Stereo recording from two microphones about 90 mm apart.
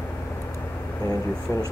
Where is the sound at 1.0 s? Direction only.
40° left (ahead or behind).